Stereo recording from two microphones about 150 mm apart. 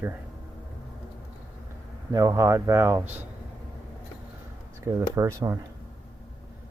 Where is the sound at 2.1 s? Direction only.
20° right (ahead or behind).